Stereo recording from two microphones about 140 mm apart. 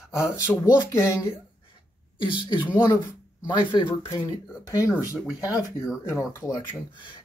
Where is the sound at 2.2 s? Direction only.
35° left (ahead or behind).